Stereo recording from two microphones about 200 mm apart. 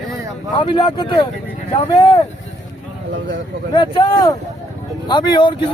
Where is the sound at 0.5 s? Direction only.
25° left (ahead or behind).